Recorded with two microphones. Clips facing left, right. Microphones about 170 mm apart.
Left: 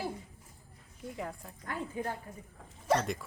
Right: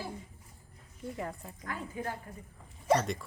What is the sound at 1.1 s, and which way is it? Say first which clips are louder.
Speech: even; centre (ahead or behind).